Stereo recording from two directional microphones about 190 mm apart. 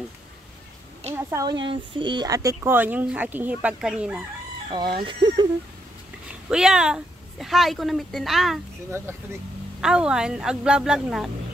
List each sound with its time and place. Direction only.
1.1 s speech: 15° right (ahead or behind)
4.6 s speech: 25° right (ahead or behind)
5.2 s a sound: 25° right (ahead or behind)
6.5 s speech: 5° right (ahead or behind)
9.8 s speech: 5° right (ahead or behind)